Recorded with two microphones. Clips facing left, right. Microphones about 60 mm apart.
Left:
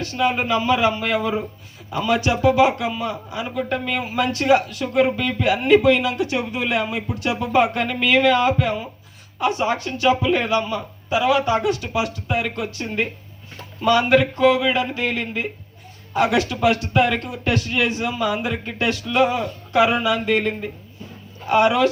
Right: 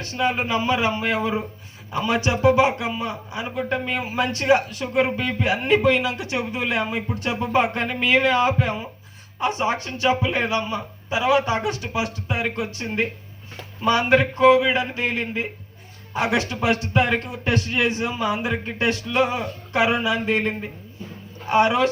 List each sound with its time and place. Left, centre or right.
0.0 s speech: right